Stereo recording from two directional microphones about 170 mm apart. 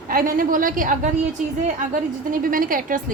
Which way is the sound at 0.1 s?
55° right (ahead or behind).